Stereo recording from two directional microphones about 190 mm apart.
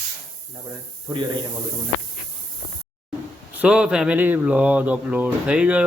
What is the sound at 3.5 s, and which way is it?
Speech, 5° right (ahead or behind).